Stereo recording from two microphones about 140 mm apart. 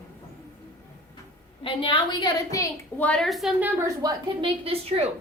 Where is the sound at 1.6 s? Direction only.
40° left (ahead or behind).